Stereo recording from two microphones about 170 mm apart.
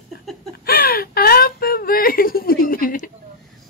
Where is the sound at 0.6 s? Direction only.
60° left (ahead or behind).